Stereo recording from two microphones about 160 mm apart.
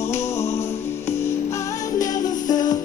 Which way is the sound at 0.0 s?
15° left (ahead or behind).